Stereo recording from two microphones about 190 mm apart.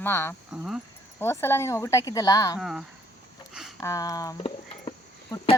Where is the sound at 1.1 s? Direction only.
15° left (ahead or behind).